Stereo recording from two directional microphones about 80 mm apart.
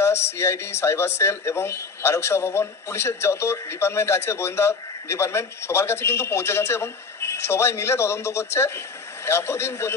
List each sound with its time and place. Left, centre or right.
0.0 s speech: left